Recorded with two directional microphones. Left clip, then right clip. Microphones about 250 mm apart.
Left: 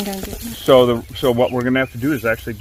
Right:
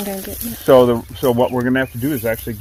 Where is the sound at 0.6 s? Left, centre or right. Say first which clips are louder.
Right 1 dB; centre.